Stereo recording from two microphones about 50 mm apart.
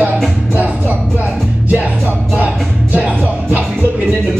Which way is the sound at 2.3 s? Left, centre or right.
Right.